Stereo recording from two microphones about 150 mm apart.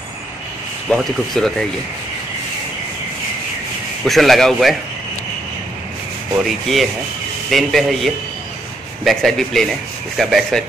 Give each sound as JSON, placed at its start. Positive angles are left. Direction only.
{"t": 0.8, "sound": "a man's voice", "side_deg": 5}
{"t": 4.0, "sound": "a man's voice", "side_deg": 0}
{"t": 6.4, "sound": "a man's voice", "side_deg": 0}